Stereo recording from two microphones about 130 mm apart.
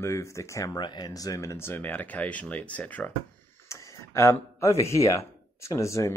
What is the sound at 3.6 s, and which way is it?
Speech, 25° left (ahead or behind).